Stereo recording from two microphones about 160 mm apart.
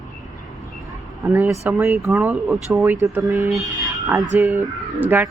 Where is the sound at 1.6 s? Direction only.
15° right (ahead or behind).